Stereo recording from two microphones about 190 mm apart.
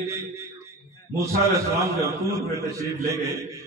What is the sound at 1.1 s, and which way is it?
A man's voice, 15° right (ahead or behind).